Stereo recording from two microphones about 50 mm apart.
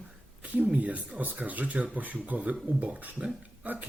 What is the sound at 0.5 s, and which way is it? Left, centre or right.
Speech, right.